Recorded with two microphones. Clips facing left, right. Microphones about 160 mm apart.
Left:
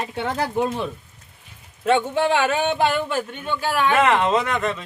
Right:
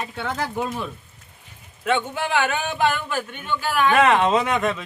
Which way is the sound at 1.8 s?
30° left (ahead or behind).